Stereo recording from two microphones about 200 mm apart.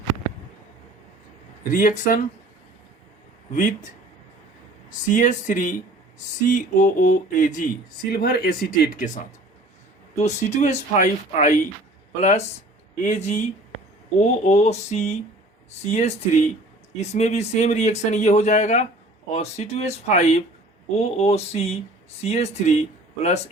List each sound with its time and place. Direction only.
1.7 s speech: 40° left (ahead or behind)
3.5 s speech: 40° left (ahead or behind)
4.9 s speech: 40° left (ahead or behind)
8.1 s speech: 50° left (ahead or behind); by 22.8 s 35° left (ahead or behind)